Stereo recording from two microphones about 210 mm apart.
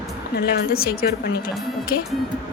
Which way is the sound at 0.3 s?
45° left (ahead or behind).